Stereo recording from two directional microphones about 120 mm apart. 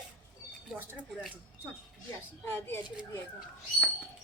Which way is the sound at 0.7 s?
15° right (ahead or behind).